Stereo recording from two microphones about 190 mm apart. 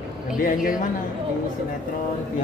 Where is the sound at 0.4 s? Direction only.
45° left (ahead or behind).